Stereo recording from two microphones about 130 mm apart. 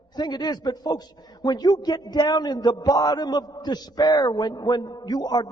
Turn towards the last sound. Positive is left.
turn(degrees=35)  # may be behind; listen again after turning